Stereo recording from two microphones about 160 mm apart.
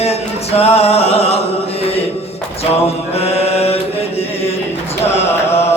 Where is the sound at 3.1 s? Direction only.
40° left (ahead or behind).